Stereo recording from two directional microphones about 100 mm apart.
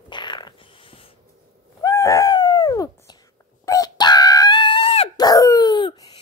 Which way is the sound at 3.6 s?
35° left (ahead or behind).